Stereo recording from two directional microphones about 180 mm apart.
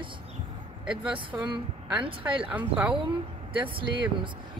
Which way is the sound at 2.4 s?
10° right (ahead or behind).